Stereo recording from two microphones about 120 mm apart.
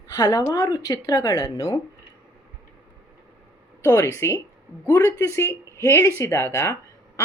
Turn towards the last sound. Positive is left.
turn(degrees=25)  # may be behind; listen again after turning